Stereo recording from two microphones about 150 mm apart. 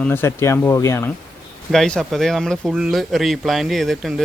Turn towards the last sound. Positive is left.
turn(degrees=0)  # may be behind; listen again after turning